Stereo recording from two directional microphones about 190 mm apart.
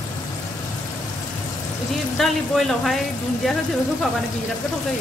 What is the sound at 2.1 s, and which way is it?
Speech, centre (ahead or behind).